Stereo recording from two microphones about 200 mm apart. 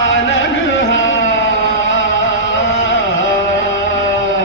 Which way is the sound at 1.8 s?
65° left (ahead or behind).